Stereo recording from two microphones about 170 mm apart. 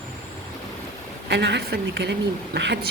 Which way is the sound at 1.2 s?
90° right.